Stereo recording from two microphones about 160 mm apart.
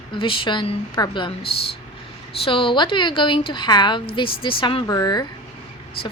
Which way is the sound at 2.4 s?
30° left (ahead or behind).